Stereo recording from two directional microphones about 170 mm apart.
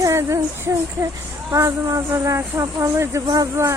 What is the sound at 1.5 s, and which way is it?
Speech, 20° right (ahead or behind).